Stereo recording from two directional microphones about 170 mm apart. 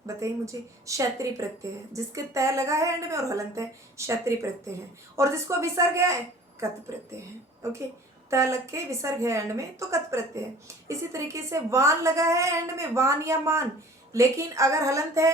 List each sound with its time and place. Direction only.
0.2 s speech: 20° right (ahead or behind)